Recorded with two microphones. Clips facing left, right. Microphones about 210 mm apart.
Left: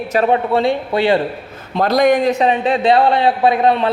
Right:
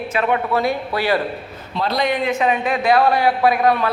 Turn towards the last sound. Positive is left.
turn(degrees=25)  # may be behind; listen again after turning